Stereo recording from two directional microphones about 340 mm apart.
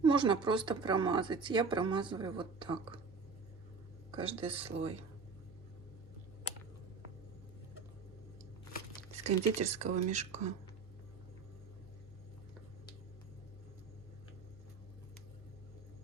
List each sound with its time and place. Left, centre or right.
0.0 s speech: centre
4.1 s speech: centre
9.1 s speech: centre